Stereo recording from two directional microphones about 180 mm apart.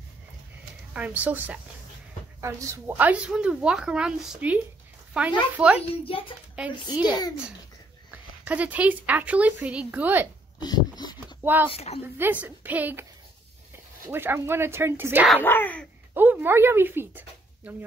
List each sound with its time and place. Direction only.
0.9 s a woman's voice: 10° right (ahead or behind)
5.8 s a child's voice: 30° left (ahead or behind)
8.1 s speech: 10° right (ahead or behind)
10.6 s a sound: 25° left (ahead or behind)
11.4 s speech: 10° right (ahead or behind)
11.7 s a child's voice: 35° left (ahead or behind)
12.2 s speech: 10° right (ahead or behind)
14.0 s speech: 10° right (ahead or behind)
15.2 s speech: 10° left (ahead or behind)
16.2 s speech: 10° right (ahead or behind)